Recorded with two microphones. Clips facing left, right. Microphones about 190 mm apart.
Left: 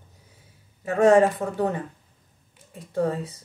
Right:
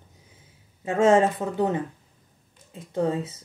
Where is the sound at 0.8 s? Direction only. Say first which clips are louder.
Left 2 dB; 20° right (ahead or behind).